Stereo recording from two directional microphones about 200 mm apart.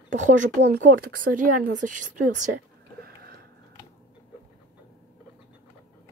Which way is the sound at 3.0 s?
50° right (ahead or behind).